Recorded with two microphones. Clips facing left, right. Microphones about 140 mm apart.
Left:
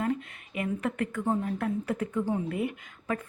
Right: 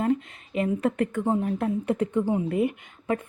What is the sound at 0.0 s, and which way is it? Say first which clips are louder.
A woman's voice: right 5 dB; 25° right (ahead or behind).